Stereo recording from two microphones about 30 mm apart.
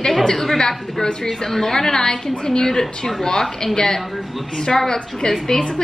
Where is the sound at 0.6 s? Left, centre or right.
Left.